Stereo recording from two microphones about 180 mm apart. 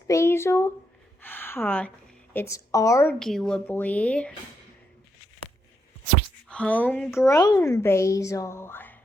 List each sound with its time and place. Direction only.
0.1 s a woman's voice: 15° left (ahead or behind)
3.2 s speech: centre (ahead or behind)
6.5 s a woman's voice: 5° left (ahead or behind)